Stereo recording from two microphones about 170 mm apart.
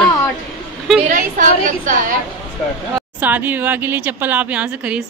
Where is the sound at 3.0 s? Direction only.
10° right (ahead or behind).